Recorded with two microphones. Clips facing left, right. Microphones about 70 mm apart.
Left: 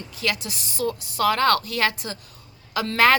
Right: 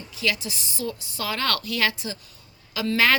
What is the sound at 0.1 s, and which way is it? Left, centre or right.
A woman's voice, left.